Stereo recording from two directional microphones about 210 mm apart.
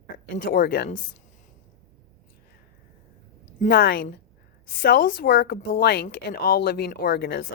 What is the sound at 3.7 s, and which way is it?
A woman's voice, 45° left (ahead or behind).